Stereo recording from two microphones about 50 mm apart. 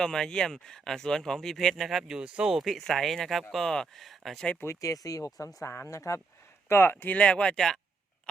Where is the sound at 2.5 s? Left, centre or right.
Centre.